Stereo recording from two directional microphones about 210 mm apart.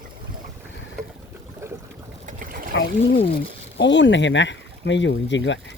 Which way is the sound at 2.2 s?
40° right (ahead or behind).